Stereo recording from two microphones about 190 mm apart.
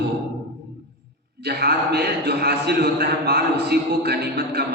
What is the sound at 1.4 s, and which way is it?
A man's voice, 55° right (ahead or behind).